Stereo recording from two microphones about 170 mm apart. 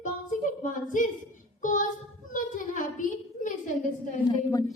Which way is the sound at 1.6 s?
50° left (ahead or behind).